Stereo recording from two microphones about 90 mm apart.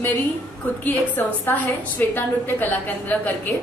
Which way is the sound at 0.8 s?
20° left (ahead or behind).